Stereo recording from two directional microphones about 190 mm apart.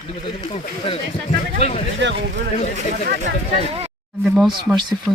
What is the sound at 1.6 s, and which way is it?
Speech, 35° left (ahead or behind).